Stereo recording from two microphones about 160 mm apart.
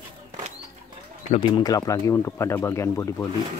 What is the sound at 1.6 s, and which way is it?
Speech, 20° left (ahead or behind).